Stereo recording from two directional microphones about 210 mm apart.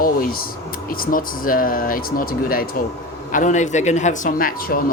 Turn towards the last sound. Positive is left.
turn(degrees=45)  # may be behind; listen again after turning